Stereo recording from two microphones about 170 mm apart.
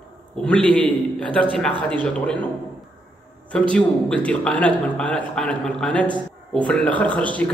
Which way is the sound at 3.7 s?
5° left (ahead or behind).